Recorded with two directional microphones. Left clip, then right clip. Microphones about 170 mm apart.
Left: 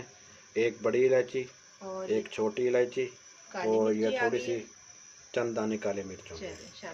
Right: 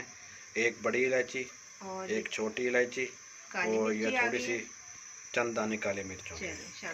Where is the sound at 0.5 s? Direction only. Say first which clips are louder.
Left 3 dB; 50° left (ahead or behind).